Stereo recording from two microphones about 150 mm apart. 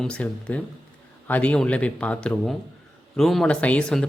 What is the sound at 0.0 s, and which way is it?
Speech, 5° left (ahead or behind).